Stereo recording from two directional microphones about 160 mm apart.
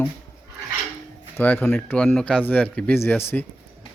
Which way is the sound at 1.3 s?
10° left (ahead or behind).